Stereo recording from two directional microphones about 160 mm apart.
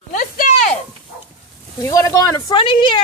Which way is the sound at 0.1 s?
55° left (ahead or behind).